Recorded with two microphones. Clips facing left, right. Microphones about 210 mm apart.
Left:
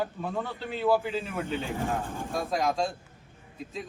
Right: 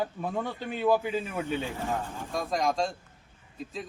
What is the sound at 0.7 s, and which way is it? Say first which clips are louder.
Speech: even; 15° right (ahead or behind).